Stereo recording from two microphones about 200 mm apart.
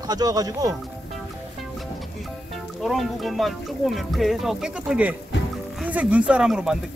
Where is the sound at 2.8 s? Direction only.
Centre (ahead or behind).